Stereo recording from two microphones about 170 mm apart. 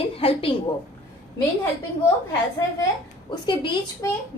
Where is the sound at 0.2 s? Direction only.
35° left (ahead or behind).